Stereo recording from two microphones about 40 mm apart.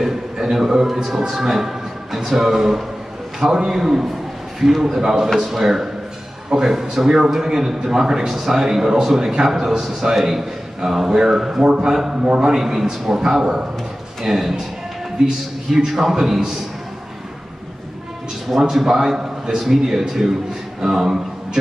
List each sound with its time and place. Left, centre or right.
0.0 s a man's voice: centre
18.6 s a man's voice: centre